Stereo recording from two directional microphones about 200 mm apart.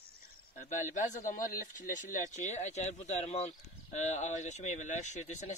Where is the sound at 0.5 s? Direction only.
40° left (ahead or behind).